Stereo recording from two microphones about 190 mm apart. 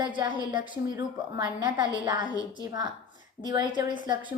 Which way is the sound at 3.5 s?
20° right (ahead or behind).